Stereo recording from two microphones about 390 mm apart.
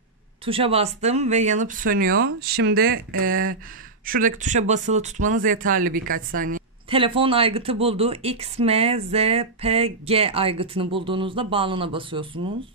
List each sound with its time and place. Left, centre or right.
0.5 s a woman's voice: centre